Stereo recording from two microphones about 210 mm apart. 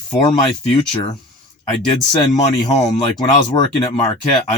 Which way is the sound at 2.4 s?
15° left (ahead or behind).